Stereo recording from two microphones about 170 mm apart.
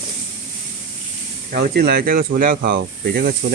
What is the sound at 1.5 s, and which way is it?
Speech, 70° right (ahead or behind).